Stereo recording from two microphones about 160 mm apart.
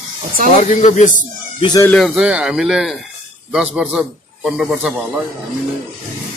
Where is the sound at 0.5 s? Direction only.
50° left (ahead or behind).